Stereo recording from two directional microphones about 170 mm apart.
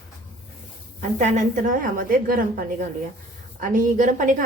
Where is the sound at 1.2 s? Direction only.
50° right (ahead or behind).